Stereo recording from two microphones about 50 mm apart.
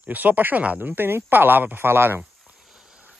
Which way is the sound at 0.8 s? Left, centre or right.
Right.